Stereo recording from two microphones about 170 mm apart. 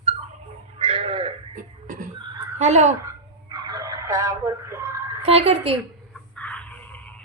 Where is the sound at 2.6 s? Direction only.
40° right (ahead or behind).